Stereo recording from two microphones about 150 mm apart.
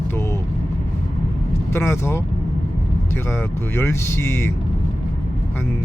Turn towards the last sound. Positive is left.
turn(degrees=15)  # may be behind; listen again after turning